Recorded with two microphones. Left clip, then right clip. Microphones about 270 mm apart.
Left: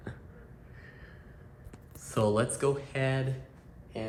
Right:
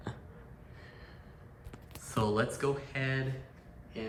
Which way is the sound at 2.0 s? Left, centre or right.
Centre.